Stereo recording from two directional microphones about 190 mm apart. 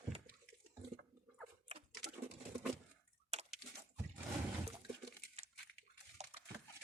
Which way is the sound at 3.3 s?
30° right (ahead or behind).